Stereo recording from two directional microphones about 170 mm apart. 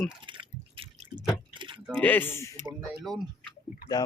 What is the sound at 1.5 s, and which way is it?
Keys jangling, 30° right (ahead or behind).